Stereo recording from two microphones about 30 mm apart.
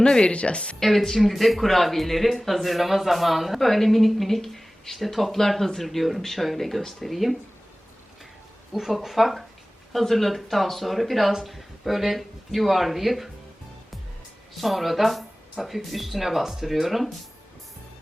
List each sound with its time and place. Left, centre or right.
0.0 s speech: left
0.8 s speech: centre
8.7 s speech: centre
14.5 s speech: centre